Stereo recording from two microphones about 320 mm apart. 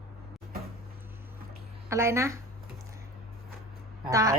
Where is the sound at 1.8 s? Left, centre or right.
Centre.